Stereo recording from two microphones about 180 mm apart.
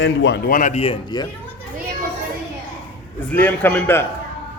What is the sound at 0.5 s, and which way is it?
Speech, 40° left (ahead or behind).